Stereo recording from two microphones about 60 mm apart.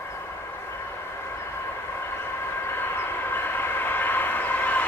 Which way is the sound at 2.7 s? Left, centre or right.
Left.